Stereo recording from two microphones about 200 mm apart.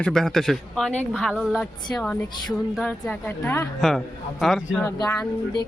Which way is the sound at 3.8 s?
Centre (ahead or behind).